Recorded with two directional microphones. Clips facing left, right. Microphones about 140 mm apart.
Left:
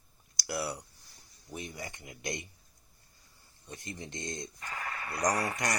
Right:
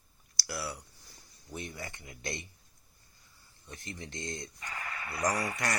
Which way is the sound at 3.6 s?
20° left (ahead or behind).